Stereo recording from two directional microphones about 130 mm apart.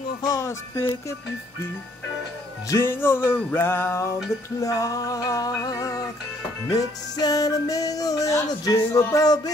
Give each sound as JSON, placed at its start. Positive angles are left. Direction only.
{"t": 0.2, "sound": "music", "side_deg": 25}
{"t": 2.7, "sound": "music", "side_deg": 20}